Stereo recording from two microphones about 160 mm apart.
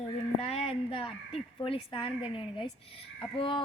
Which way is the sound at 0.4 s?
40° left (ahead or behind).